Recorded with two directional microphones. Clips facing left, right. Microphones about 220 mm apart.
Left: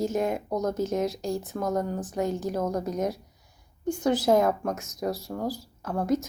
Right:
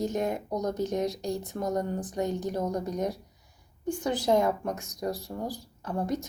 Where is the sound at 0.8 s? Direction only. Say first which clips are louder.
Left 2 dB; 15° right (ahead or behind).